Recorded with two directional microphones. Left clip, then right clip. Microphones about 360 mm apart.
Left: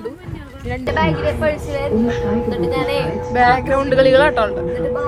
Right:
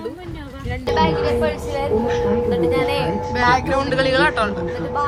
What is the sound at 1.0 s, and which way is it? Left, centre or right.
Speech, left.